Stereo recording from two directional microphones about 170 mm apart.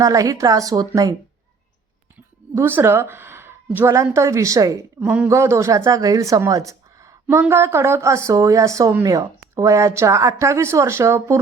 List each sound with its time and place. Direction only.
0.0 s speech: 20° right (ahead or behind)
2.1 s speech: 10° right (ahead or behind)
4.9 s a woman's voice: 10° right (ahead or behind)